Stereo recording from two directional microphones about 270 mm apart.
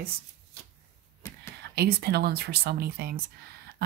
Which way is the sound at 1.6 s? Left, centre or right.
Right.